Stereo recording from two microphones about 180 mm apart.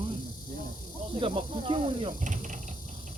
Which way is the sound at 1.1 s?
30° right (ahead or behind).